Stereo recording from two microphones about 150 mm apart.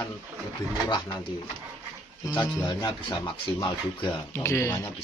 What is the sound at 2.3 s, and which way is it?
A man's voice, 25° left (ahead or behind).